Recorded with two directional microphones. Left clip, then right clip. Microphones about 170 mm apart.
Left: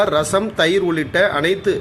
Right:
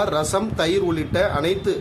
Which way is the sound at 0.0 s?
10° left (ahead or behind).